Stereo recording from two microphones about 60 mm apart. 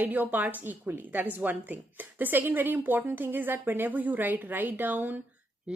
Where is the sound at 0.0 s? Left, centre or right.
Right.